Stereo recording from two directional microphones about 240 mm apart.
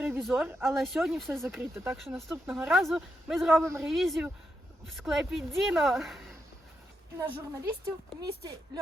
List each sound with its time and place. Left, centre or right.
0.0 s speech: centre
2.0 s speech: centre
3.6 s a woman's voice: centre
3.8 s speech: centre
7.2 s a woman's voice: centre